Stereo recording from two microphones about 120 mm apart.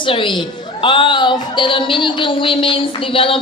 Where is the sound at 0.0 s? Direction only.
45° left (ahead or behind).